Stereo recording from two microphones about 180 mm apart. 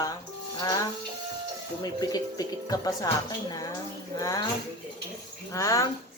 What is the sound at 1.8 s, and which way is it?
Speech, 20° left (ahead or behind).